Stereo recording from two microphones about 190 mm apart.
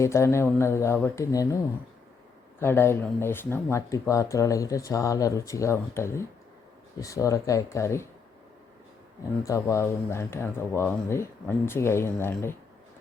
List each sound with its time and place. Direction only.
0.0 s speech: 15° left (ahead or behind)
2.6 s speech: 10° left (ahead or behind)
9.4 s speech: 15° left (ahead or behind)